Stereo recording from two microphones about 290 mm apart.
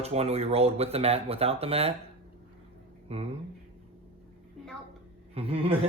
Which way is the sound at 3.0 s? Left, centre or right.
Centre.